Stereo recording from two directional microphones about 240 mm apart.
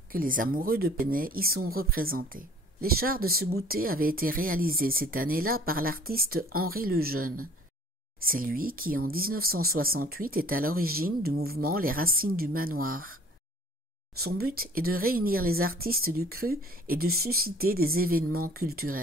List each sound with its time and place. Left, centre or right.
0.1 s speech: right
14.2 s speech: right